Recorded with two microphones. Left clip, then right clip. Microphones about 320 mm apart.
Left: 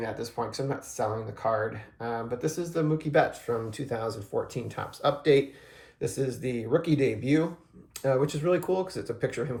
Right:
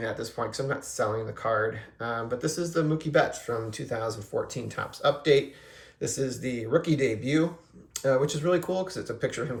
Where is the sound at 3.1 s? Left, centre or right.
Centre.